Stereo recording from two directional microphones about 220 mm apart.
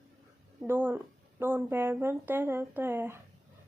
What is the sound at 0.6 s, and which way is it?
Speech, 10° right (ahead or behind).